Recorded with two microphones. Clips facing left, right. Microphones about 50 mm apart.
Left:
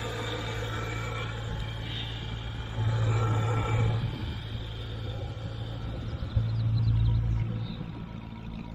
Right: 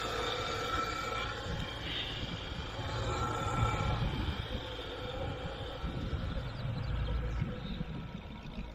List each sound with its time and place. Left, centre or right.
0.0 s vehicle: centre
2.8 s vehicle: left